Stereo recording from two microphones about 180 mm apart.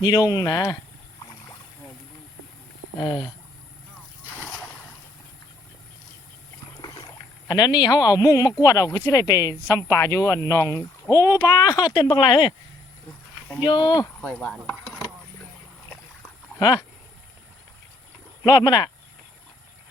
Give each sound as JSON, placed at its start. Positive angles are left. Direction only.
{"t": 0.0, "sound": "speech", "side_deg": 25}
{"t": 3.0, "sound": "speech", "side_deg": 25}
{"t": 6.8, "sound": "rowboat", "side_deg": 25}
{"t": 8.6, "sound": "speech", "side_deg": 20}
{"t": 13.6, "sound": "speech", "side_deg": 25}
{"t": 14.2, "sound": "a sound", "side_deg": 5}
{"t": 16.6, "sound": "speech", "side_deg": 20}
{"t": 18.4, "sound": "speech", "side_deg": 20}